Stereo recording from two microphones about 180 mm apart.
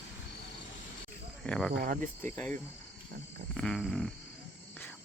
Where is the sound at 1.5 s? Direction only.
5° left (ahead or behind).